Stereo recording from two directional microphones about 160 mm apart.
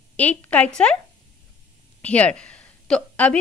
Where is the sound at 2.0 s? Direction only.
10° left (ahead or behind).